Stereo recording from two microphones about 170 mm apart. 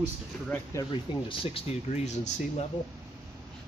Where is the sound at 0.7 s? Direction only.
30° left (ahead or behind).